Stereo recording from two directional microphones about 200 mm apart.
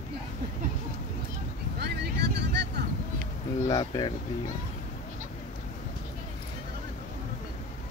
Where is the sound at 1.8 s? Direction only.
55° right (ahead or behind).